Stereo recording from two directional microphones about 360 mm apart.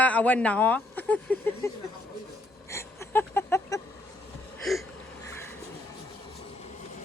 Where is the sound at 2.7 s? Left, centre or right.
Centre.